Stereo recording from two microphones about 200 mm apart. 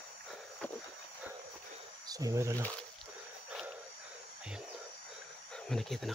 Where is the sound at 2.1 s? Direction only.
15° right (ahead or behind).